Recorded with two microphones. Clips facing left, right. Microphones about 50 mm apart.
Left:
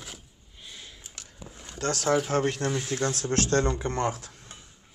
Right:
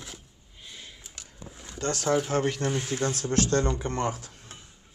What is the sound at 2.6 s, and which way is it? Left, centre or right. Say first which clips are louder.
Speech: even; right.